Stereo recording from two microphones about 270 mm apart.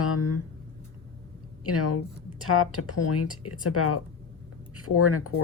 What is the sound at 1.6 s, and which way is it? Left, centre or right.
Speech, left.